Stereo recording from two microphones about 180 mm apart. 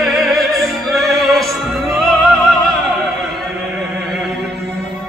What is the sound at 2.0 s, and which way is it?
Opera, centre (ahead or behind).